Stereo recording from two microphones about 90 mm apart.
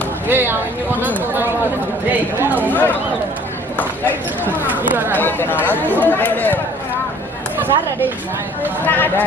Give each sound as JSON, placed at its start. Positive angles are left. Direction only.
{"t": 0.3, "sound": "speech", "side_deg": -20}
{"t": 2.0, "sound": "speech", "side_deg": -20}
{"t": 2.6, "sound": "speech", "side_deg": 20}
{"t": 4.5, "sound": "a sound", "side_deg": -25}
{"t": 5.1, "sound": "speech", "side_deg": 20}
{"t": 8.8, "sound": "speech", "side_deg": 20}